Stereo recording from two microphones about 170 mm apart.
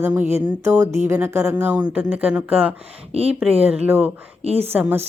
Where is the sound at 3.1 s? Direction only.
35° right (ahead or behind).